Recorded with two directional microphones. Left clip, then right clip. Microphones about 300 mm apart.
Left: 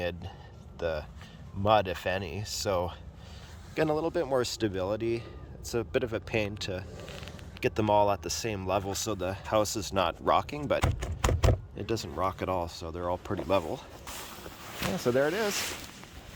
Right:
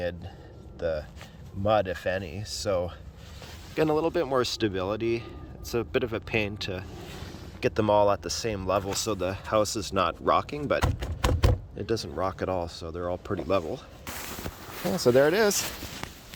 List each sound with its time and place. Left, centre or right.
0.8 s speech: centre
14.9 s speech: centre